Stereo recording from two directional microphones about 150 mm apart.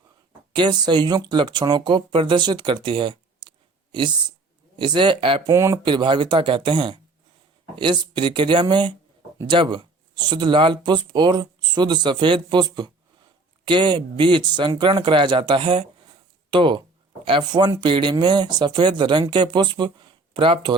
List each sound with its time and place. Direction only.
0.5 s speech: 30° right (ahead or behind)
4.8 s speech: 30° right (ahead or behind)
5.5 s speech: 20° right (ahead or behind)
5.8 s speech: 30° right (ahead or behind)